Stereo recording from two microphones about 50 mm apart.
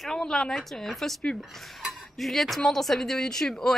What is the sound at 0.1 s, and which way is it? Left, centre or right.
A woman's voice, centre.